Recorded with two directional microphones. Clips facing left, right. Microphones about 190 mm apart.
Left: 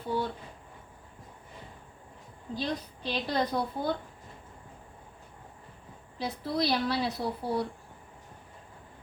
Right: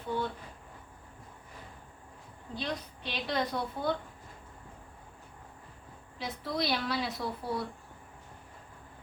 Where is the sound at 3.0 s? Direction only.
35° left (ahead or behind).